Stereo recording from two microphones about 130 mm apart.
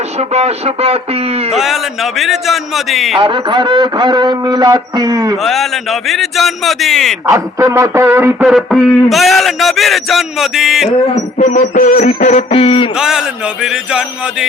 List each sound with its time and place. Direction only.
0.2 s speech: 55° right (ahead or behind)
1.5 s a man's voice: centre (ahead or behind)
3.2 s a man's voice: 40° right (ahead or behind)
5.4 s a man's voice: centre (ahead or behind)
7.3 s speech: 20° right (ahead or behind)
8.4 s a man's voice: centre (ahead or behind)
11.1 s a sound: 70° left (ahead or behind); by 12.9 s 45° left (ahead or behind)
13.0 s a man's voice: 5° right (ahead or behind)